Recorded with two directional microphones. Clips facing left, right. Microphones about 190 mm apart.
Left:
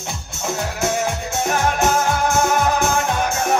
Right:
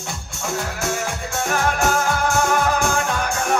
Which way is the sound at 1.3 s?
20° left (ahead or behind).